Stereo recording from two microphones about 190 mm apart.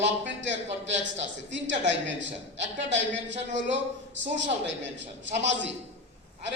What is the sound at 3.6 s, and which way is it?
A man's voice, 75° right (ahead or behind).